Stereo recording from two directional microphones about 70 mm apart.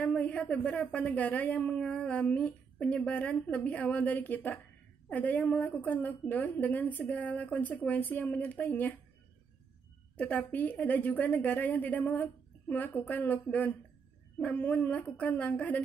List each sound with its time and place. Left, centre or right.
0.0 s speech: centre
10.1 s speech: left